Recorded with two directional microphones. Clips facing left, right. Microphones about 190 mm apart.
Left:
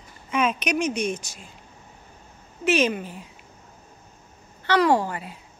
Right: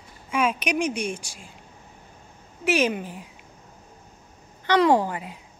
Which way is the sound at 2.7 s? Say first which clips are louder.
Left 1 dB; 10° right (ahead or behind).